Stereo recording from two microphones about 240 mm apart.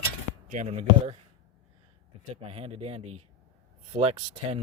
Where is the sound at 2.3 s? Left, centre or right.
Right.